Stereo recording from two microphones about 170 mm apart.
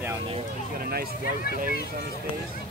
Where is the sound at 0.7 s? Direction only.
65° right (ahead or behind).